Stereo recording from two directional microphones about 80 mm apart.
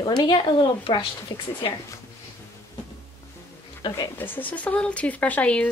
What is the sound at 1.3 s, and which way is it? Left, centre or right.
Speech, left.